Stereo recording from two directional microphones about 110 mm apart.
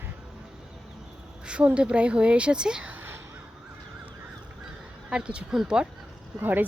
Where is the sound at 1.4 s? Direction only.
10° right (ahead or behind).